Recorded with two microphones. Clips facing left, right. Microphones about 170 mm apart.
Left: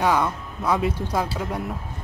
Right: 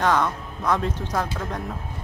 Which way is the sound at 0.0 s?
10° left (ahead or behind).